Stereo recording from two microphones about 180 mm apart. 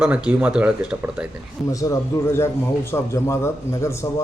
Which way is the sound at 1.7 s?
20° left (ahead or behind).